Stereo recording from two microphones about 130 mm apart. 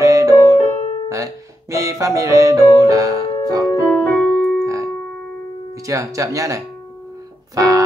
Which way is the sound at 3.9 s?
15° left (ahead or behind).